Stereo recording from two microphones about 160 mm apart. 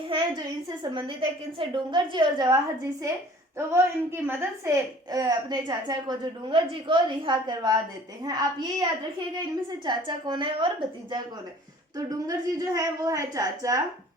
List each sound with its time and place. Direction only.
0.1 s a woman's voice: 25° right (ahead or behind)
3.6 s a woman's voice: 15° right (ahead or behind)